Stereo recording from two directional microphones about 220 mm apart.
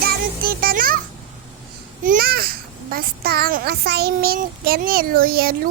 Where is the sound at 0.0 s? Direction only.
45° right (ahead or behind).